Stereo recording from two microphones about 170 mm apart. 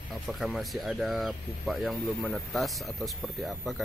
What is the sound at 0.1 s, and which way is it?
Speech, centre (ahead or behind).